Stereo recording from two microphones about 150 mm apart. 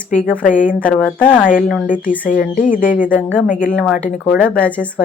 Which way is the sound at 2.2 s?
65° left (ahead or behind).